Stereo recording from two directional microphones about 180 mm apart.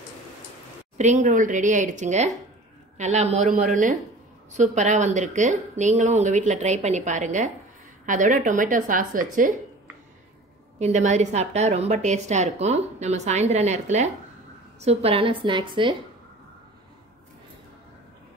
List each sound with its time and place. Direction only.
0.9 s a woman's voice: 40° right (ahead or behind)
10.8 s a woman's voice: 40° right (ahead or behind)